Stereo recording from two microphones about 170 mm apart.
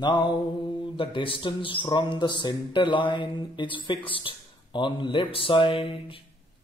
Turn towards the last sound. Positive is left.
turn(degrees=30)  # may be behind; listen again after turning